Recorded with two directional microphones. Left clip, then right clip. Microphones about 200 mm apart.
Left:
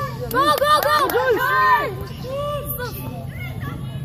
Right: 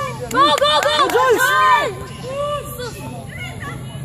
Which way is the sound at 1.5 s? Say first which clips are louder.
Right 3 dB; 40° right (ahead or behind).